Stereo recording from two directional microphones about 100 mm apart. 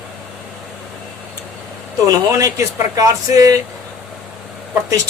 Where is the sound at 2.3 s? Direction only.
35° right (ahead or behind).